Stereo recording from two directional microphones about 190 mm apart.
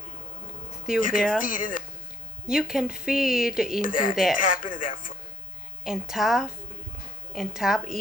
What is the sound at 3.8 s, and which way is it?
Speech, 45° left (ahead or behind).